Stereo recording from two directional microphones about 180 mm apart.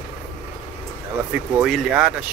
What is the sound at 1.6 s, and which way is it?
Speech, 5° right (ahead or behind).